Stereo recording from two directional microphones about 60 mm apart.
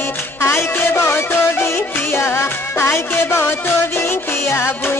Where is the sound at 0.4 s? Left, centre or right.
Left.